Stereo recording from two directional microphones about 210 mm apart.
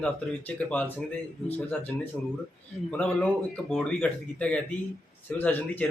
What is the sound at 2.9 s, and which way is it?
A man's voice, 5° left (ahead or behind).